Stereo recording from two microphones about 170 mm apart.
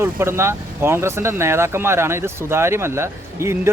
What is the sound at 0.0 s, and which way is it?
Speech, 15° right (ahead or behind).